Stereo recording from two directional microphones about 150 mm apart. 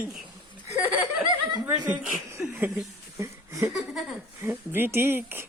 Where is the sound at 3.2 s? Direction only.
20° right (ahead or behind).